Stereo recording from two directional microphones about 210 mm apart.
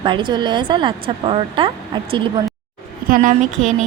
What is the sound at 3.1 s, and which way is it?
Speech, 40° right (ahead or behind).